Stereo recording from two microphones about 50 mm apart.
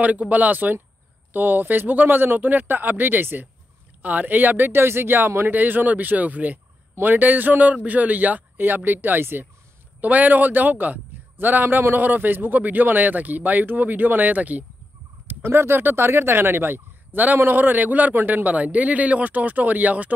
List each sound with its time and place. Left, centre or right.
0.0 s speech: right
4.0 s speech: right
9.9 s a man's voice: right
15.4 s speech: right